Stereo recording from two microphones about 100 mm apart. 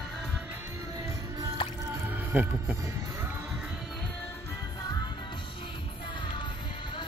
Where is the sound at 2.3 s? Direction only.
20° right (ahead or behind).